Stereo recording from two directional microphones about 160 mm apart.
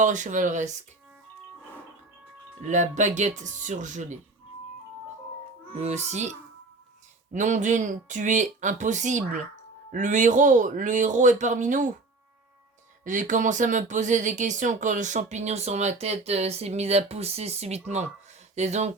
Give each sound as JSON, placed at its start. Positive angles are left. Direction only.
{"t": 0.0, "sound": "speech", "side_deg": -50}
{"t": 2.6, "sound": "speech", "side_deg": -50}
{"t": 5.7, "sound": "speech", "side_deg": -45}
{"t": 7.3, "sound": "speech", "side_deg": -50}
{"t": 13.1, "sound": "speech", "side_deg": -50}